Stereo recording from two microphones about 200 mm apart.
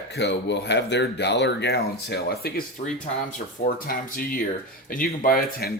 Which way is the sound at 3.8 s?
45° left (ahead or behind).